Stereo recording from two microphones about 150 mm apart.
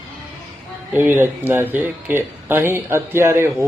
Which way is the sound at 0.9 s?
15° right (ahead or behind).